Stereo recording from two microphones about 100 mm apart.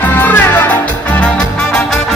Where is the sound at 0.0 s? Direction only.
20° left (ahead or behind).